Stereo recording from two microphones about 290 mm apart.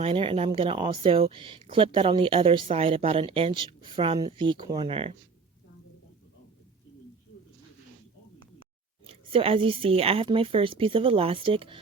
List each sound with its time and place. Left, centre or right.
0.0 s speech: centre
9.0 s a woman's voice: centre